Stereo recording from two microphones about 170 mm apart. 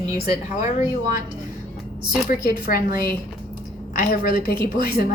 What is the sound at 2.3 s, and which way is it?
A woman's voice, 60° left (ahead or behind).